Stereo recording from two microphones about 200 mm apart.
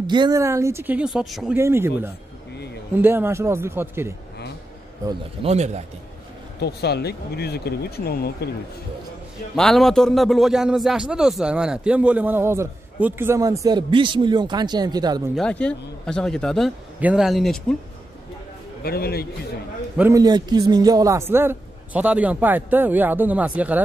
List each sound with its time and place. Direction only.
0.0 s a man's voice: 20° right (ahead or behind); by 1.6 s centre (ahead or behind)
1.6 s a man's voice: 10° right (ahead or behind)
5.4 s a man's voice: 35° right (ahead or behind)
6.6 s speech: 55° left (ahead or behind)
9.6 s a man's voice: centre (ahead or behind); by 15.2 s 20° right (ahead or behind)
15.3 s a man's voice: 5° left (ahead or behind)
18.8 s a man's voice: 50° left (ahead or behind)
20.0 s a man's voice: 15° right (ahead or behind)